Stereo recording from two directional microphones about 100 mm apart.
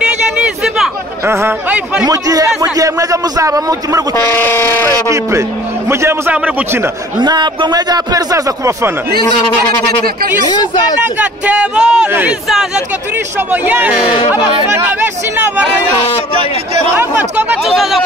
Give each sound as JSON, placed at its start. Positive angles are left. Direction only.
{"t": 0.0, "sound": "a sound", "side_deg": -10}
{"t": 1.2, "sound": "speech", "side_deg": -25}
{"t": 2.0, "sound": "speech", "side_deg": -35}
{"t": 4.4, "sound": "speech", "side_deg": 25}
{"t": 5.9, "sound": "speech", "side_deg": -25}
{"t": 6.3, "sound": "speech", "side_deg": -15}
{"t": 7.2, "sound": "speech", "side_deg": -50}
{"t": 10.5, "sound": "speech", "side_deg": 45}
{"t": 11.1, "sound": "speech", "side_deg": -15}
{"t": 12.1, "sound": "speech", "side_deg": -20}
{"t": 12.4, "sound": "speech", "side_deg": -5}
{"t": 13.5, "sound": "speech", "side_deg": -15}
{"t": 16.9, "sound": "speech", "side_deg": -20}
{"t": 17.6, "sound": "speech", "side_deg": 0}